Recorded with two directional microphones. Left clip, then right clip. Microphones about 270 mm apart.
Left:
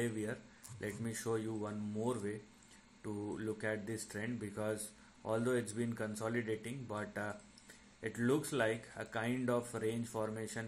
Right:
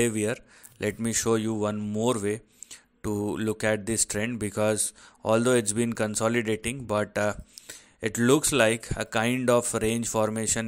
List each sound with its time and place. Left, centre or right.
0.0 s speech: right